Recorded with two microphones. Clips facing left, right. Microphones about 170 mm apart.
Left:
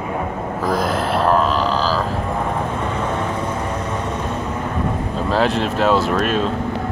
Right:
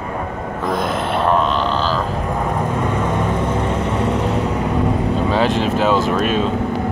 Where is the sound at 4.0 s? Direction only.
75° right (ahead or behind).